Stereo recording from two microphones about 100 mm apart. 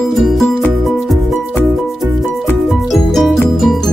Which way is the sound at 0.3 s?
Centre (ahead or behind).